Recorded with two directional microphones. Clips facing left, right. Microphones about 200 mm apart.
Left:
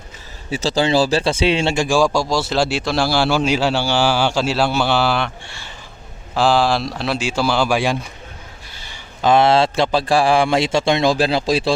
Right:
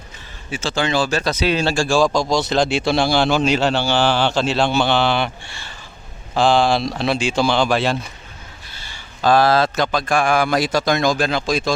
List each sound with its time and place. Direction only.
0.5 s speech: 35° left (ahead or behind); by 2.0 s 15° left (ahead or behind)
2.5 s a man's voice: 5° left (ahead or behind); by 11.7 s 30° left (ahead or behind)